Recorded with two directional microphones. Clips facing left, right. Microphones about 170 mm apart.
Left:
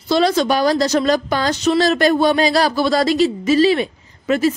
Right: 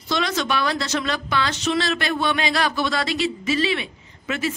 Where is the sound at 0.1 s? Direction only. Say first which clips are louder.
Left 8 dB; 35° left (ahead or behind).